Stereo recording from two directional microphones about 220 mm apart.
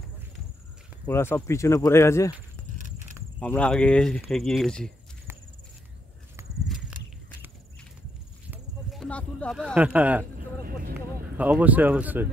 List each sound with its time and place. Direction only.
1.0 s speech: 10° left (ahead or behind)
3.3 s speech: 5° left (ahead or behind)
8.5 s a sound: centre (ahead or behind)
10.6 s vehicle: 40° right (ahead or behind)
11.3 s speech: 5° right (ahead or behind)